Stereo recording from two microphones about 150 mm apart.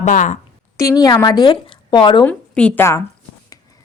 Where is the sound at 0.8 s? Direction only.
20° left (ahead or behind).